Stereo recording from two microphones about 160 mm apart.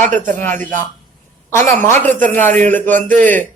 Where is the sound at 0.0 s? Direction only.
55° right (ahead or behind).